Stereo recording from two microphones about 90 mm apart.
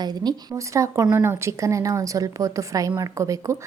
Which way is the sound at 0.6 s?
35° right (ahead or behind).